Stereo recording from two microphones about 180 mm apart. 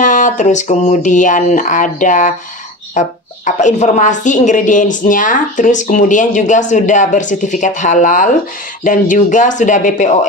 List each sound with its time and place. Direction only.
0.0 s a woman's voice: 45° left (ahead or behind)